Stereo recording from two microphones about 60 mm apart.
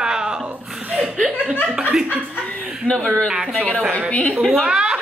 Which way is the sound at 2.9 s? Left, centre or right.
Centre.